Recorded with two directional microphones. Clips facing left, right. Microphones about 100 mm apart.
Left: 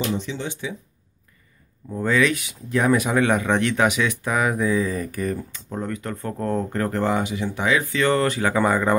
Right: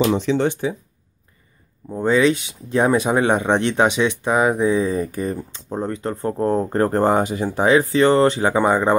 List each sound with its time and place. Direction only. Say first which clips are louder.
0.0 s speech: right 9 dB; 85° right; by 0.7 s 50° right (ahead or behind)
1.9 s speech: right 4 dB; 25° right (ahead or behind)